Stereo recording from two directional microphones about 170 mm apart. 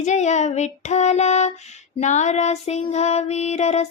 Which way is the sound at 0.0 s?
45° left (ahead or behind).